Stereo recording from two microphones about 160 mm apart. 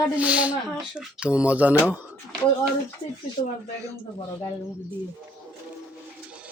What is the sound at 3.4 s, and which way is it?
Speech, 60° left (ahead or behind).